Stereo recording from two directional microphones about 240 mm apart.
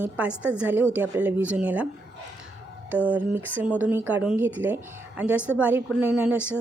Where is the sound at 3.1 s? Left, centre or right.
Centre.